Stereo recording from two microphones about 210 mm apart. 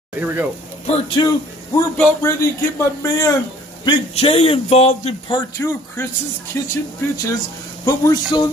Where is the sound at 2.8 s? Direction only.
15° left (ahead or behind).